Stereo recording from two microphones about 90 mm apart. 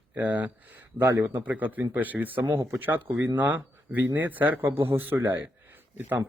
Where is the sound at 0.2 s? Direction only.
15° right (ahead or behind).